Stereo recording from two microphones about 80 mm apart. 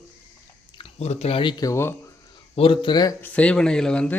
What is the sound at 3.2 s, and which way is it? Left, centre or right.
Speech, centre.